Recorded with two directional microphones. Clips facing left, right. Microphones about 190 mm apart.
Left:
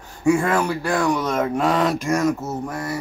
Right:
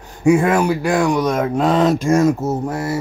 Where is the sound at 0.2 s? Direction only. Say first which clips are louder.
Right 4 dB; 20° right (ahead or behind).